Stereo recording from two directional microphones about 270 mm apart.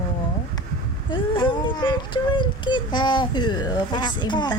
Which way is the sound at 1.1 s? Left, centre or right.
Centre.